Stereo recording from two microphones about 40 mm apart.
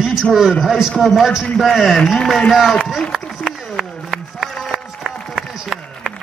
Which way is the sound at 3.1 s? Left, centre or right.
Centre.